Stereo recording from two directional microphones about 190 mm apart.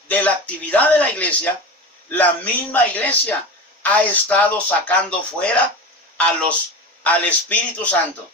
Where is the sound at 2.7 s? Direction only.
10° left (ahead or behind).